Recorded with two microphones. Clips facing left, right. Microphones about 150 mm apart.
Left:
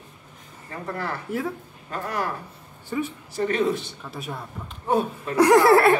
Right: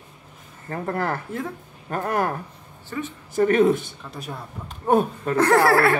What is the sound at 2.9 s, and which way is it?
Speech, 15° left (ahead or behind).